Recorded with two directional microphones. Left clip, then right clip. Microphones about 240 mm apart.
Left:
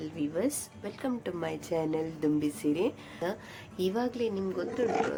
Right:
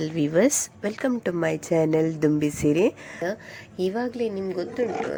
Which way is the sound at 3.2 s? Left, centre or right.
Centre.